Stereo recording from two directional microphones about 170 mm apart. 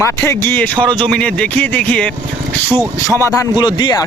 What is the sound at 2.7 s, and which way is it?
Speech, 15° right (ahead or behind).